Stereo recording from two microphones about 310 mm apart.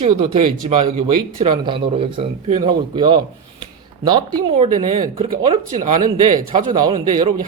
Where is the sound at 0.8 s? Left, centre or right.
Centre.